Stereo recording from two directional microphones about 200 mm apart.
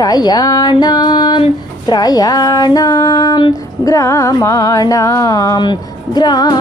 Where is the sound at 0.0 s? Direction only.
20° left (ahead or behind).